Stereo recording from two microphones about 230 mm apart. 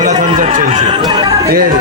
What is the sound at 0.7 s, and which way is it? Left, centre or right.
Speech, centre.